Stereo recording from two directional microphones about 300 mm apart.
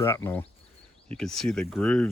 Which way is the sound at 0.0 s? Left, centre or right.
Centre.